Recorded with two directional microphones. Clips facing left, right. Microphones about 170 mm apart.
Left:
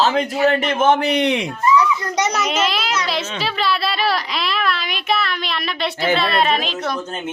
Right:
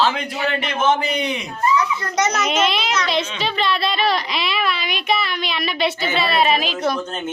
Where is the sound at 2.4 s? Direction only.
Centre (ahead or behind).